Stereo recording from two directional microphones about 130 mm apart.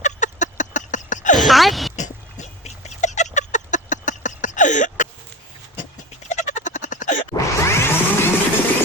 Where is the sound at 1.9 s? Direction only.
65° left (ahead or behind).